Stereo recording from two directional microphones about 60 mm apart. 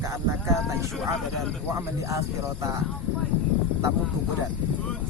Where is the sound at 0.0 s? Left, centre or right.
Right.